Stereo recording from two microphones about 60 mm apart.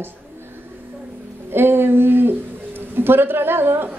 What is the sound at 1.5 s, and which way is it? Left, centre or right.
Speech, right.